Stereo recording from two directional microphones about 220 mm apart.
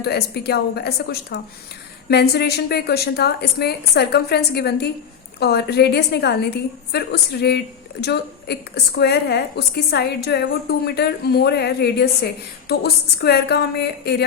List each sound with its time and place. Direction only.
0.0 s a woman's voice: 45° left (ahead or behind)